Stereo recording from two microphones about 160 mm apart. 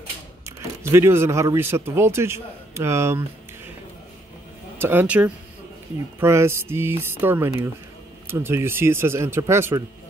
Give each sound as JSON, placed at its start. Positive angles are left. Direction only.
{"t": 0.8, "sound": "a man's voice", "side_deg": -15}
{"t": 4.7, "sound": "a man's voice", "side_deg": -10}